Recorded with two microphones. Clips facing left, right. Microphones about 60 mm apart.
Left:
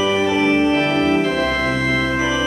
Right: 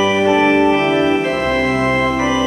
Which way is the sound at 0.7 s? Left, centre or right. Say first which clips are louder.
Right 3 dB; right.